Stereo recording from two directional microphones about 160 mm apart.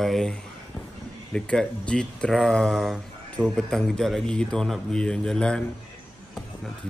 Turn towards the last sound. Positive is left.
turn(degrees=5)  # may be behind; listen again after turning